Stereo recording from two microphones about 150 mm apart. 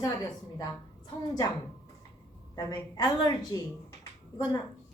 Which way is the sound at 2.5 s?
25° left (ahead or behind).